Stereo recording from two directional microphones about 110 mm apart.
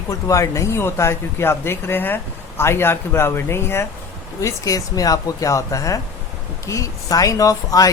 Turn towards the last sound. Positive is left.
turn(degrees=30)  # may be behind; listen again after turning